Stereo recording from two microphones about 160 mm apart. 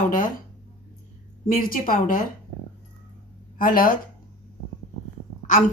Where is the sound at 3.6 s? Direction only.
60° left (ahead or behind).